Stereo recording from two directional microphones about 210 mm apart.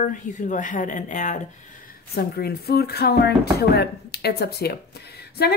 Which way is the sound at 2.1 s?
50° left (ahead or behind).